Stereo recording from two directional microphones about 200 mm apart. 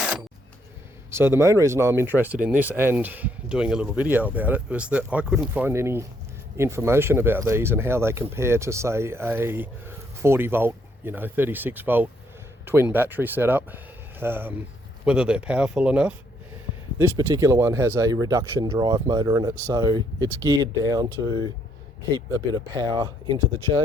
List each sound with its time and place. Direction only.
1.1 s speech: 10° right (ahead or behind)
22.5 s speech: 20° right (ahead or behind)